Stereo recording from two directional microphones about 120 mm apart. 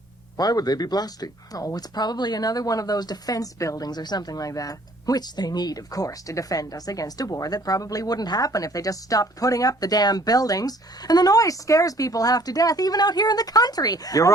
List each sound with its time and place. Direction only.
0.3 s speech: 35° left (ahead or behind)